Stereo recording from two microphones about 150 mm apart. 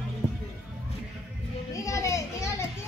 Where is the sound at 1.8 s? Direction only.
20° left (ahead or behind).